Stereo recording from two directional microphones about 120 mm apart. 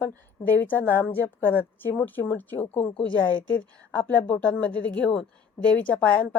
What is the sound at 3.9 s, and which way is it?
A woman's voice, 10° left (ahead or behind).